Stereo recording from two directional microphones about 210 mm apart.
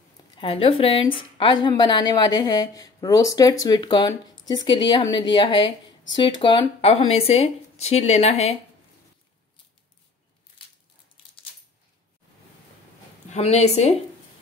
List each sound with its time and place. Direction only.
0.4 s a woman's voice: 25° left (ahead or behind)
13.3 s a woman's voice: 30° left (ahead or behind)